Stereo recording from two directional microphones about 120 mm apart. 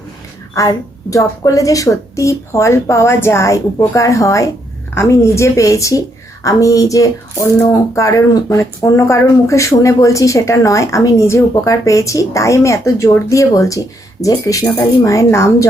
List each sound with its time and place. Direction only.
0.5 s speech: 25° left (ahead or behind)